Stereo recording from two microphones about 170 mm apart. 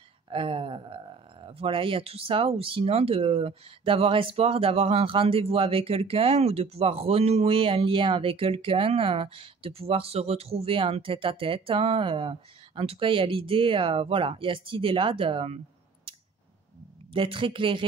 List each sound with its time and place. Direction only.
0.3 s speech: 30° right (ahead or behind)
17.1 s speech: 30° right (ahead or behind)